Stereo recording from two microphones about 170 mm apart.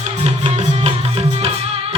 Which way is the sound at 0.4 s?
40° right (ahead or behind).